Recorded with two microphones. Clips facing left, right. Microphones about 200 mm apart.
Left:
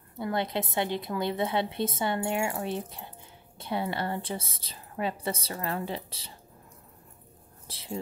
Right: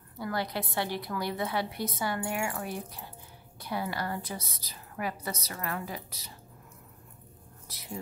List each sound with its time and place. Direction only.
0.2 s a woman's voice: 20° left (ahead or behind)
7.6 s speech: 30° left (ahead or behind)